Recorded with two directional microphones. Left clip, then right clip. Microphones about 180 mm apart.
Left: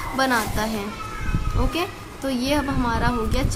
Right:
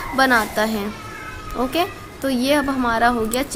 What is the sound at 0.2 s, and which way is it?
A woman's voice, 30° right (ahead or behind).